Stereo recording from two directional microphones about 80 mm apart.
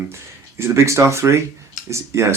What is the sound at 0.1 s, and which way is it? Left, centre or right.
Speech, right.